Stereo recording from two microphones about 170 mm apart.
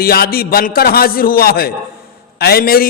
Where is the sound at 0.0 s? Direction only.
65° left (ahead or behind).